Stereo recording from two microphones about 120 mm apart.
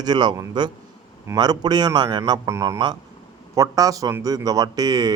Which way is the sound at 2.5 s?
25° right (ahead or behind).